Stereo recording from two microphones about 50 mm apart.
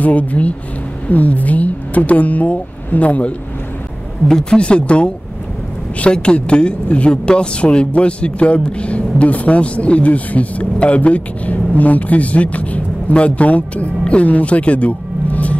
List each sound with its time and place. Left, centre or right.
0.0 s speech: left
4.3 s speech: centre